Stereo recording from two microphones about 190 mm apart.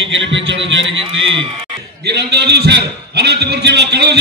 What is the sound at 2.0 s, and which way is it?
A man's voice, 60° right (ahead or behind).